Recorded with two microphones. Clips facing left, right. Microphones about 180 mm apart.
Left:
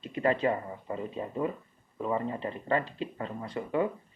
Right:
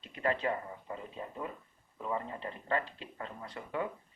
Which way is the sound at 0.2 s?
20° left (ahead or behind).